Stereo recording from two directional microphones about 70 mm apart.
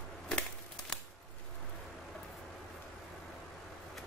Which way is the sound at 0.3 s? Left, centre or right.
Centre.